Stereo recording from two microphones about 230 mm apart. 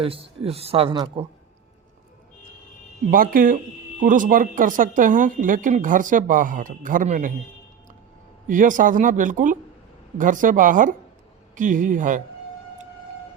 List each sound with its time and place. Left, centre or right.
0.0 s speech: right
3.1 s speech: right
8.4 s speech: right